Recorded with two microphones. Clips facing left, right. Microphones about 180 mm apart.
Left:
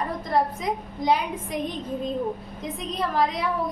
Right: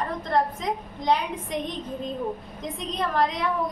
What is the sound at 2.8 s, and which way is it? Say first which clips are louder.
Speech: even; 5° left (ahead or behind).